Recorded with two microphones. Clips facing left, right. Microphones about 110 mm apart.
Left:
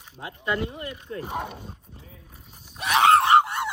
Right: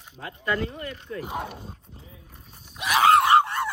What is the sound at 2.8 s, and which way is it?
Screaming, 30° left (ahead or behind).